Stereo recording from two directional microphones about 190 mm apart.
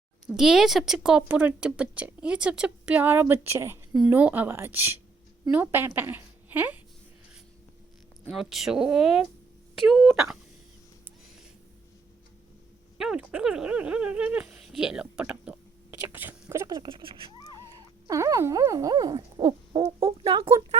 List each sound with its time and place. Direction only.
0.3 s a woman's voice: centre (ahead or behind)
8.3 s speech: centre (ahead or behind)
13.0 s speech: 5° right (ahead or behind)
16.0 s owl: 10° right (ahead or behind); by 17.2 s 30° right (ahead or behind)
18.1 s owl: 15° right (ahead or behind)